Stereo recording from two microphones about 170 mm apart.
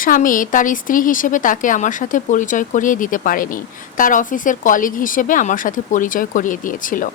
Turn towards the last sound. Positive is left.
turn(degrees=50)  # may be behind; listen again after turning